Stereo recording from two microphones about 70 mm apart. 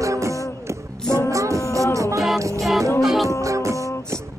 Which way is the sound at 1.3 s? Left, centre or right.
Right.